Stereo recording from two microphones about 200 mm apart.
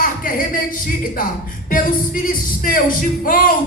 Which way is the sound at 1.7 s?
45° left (ahead or behind).